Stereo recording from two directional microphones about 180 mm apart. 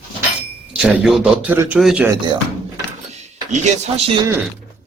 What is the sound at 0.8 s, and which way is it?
A man's voice, 5° right (ahead or behind).